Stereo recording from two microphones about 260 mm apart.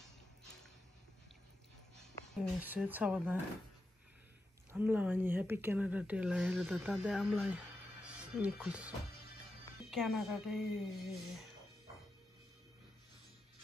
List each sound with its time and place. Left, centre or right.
2.6 s speech: centre
4.7 s speech: centre